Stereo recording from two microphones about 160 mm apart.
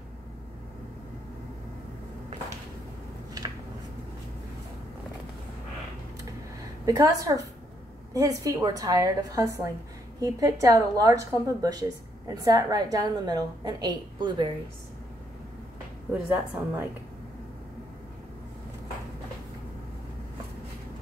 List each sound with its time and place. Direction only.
6.9 s a woman's voice: 20° right (ahead or behind)
16.1 s a woman's voice: 10° right (ahead or behind)